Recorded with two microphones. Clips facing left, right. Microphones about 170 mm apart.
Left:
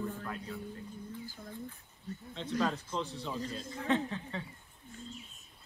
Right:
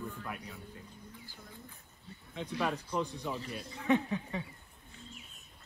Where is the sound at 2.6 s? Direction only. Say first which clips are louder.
Right 1 dB; 15° right (ahead or behind).